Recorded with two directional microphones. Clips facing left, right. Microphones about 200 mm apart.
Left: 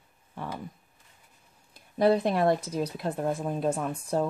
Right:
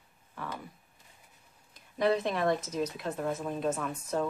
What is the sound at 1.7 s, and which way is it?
Speech, 35° left (ahead or behind).